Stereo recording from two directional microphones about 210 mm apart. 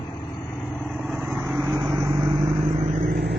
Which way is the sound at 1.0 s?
Centre (ahead or behind).